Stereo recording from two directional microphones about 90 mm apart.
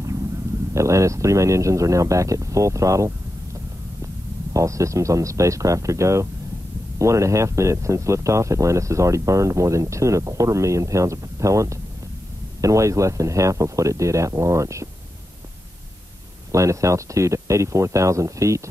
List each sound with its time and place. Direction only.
0.7 s speech: 35° right (ahead or behind)
4.6 s speech: 35° right (ahead or behind)
16.5 s speech: 35° right (ahead or behind)